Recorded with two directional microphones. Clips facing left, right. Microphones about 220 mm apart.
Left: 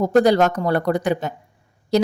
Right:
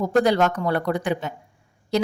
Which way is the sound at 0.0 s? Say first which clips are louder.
Left 4 dB; 40° left (ahead or behind).